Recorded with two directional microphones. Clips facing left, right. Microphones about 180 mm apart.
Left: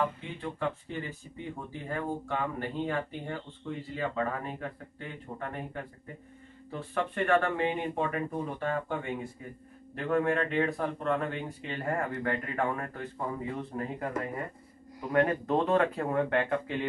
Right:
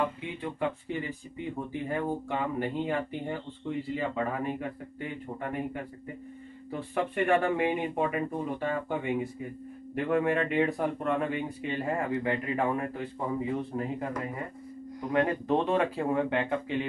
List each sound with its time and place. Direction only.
0.0 s speech: 15° right (ahead or behind)
15.0 s speech: 15° right (ahead or behind)